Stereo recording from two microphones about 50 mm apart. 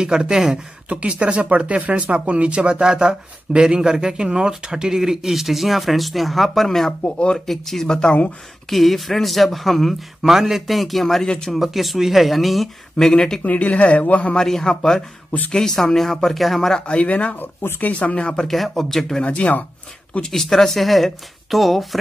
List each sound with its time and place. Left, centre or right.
0.0 s speech: centre
0.8 s speech: right; by 8.2 s centre
8.6 s speech: centre
13.4 s speech: left
14.3 s speech: centre
16.8 s speech: left
17.4 s speech: left
17.8 s speech: left
18.5 s speech: centre
19.2 s speech: left
20.2 s speech: centre